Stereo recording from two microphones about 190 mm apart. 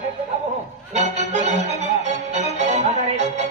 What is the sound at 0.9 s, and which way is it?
Music, 35° right (ahead or behind).